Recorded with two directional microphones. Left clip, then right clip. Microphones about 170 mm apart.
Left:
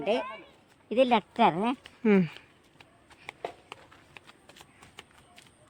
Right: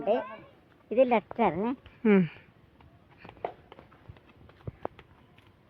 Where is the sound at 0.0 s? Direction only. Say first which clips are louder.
Right 1 dB; 70° left (ahead or behind).